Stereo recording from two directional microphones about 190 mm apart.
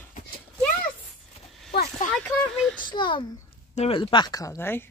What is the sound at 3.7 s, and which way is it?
Speech, 30° left (ahead or behind).